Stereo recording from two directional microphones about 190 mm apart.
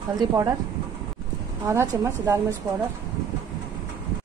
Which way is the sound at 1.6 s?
15° right (ahead or behind).